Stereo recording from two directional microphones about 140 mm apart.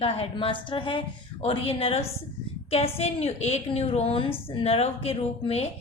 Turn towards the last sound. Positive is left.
turn(degrees=50)  # may be behind; listen again after turning